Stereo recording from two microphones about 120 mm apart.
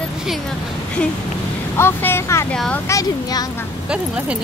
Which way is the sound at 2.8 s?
30° left (ahead or behind).